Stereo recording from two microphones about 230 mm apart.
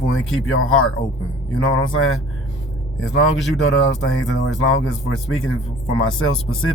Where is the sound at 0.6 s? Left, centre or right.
Left.